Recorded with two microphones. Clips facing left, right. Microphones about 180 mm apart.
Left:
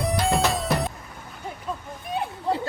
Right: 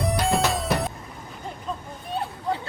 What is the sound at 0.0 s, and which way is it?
Music, centre (ahead or behind).